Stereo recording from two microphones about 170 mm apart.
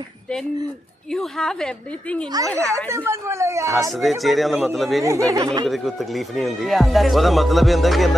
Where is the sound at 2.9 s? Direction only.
15° right (ahead or behind).